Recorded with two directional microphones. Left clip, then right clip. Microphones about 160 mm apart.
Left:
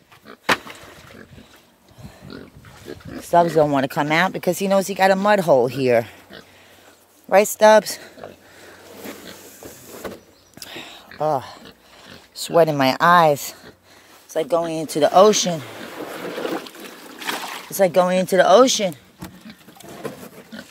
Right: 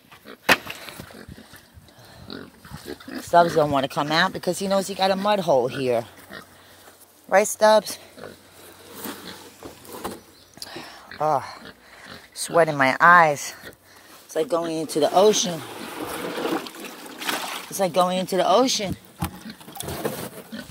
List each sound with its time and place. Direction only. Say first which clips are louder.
2.9 s pig: left 1 dB; 5° right (ahead or behind)
3.3 s speech: left 2 dB; 55° left (ahead or behind)
7.2 s speech: left 4 dB; 60° left (ahead or behind)
10.7 s a sound: left 3 dB; 50° left (ahead or behind)
12.4 s speech: left 3 dB; 50° left (ahead or behind)
16.4 s water: right 1 dB; 20° right (ahead or behind)
17.2 s a sound: even; 25° right (ahead or behind)
17.7 s speech: left 5 dB; 50° left (ahead or behind)